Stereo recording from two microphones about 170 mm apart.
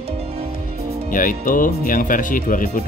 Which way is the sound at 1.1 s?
50° left (ahead or behind).